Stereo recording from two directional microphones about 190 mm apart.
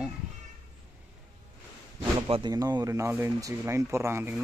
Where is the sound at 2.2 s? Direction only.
30° right (ahead or behind).